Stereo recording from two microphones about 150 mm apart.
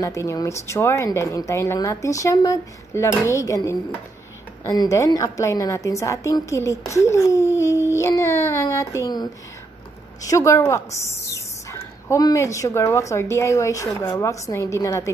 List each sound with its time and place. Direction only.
0.0 s speech: 20° left (ahead or behind)
7.9 s a sound: 20° left (ahead or behind)
10.2 s speech: 20° left (ahead or behind)